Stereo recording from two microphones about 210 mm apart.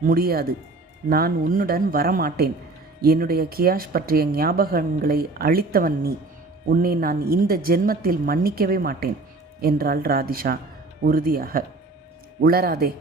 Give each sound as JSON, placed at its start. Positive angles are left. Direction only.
{"t": 0.1, "sound": "speech", "side_deg": -45}